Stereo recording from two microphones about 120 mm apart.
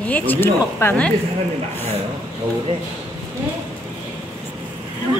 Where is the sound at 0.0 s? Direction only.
15° left (ahead or behind).